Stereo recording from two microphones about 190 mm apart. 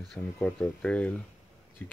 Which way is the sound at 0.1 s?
5° left (ahead or behind).